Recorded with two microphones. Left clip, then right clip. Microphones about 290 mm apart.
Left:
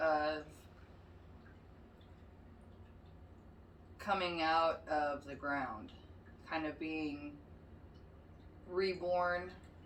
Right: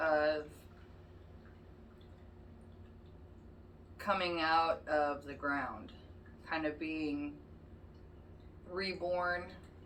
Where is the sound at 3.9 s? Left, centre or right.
Centre.